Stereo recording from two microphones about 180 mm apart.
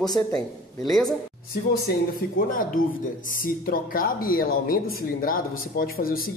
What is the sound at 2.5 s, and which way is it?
Speech, 50° left (ahead or behind).